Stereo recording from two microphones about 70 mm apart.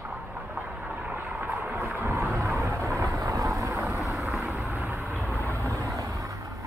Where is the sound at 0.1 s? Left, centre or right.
Right.